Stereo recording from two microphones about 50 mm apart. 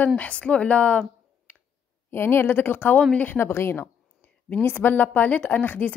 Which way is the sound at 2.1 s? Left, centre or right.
Left.